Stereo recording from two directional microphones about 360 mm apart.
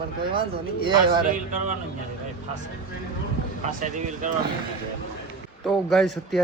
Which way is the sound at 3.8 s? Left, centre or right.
Right.